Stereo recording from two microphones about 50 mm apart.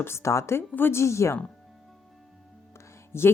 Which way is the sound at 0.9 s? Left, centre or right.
Left.